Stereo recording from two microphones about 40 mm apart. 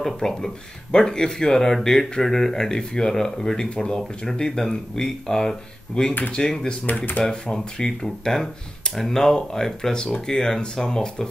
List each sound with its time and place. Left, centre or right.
0.0 s speech: centre
6.9 s speech: left
7.2 s speech: centre